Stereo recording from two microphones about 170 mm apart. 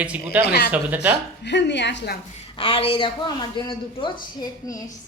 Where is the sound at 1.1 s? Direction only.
90° left.